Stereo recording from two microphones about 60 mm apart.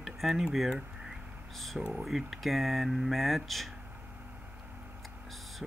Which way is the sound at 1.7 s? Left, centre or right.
Centre.